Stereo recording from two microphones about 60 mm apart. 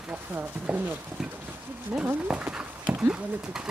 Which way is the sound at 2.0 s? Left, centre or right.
Right.